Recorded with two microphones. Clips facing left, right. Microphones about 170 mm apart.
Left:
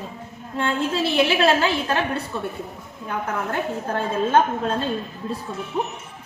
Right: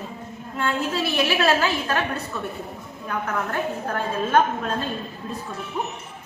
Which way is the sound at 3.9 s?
30° left (ahead or behind).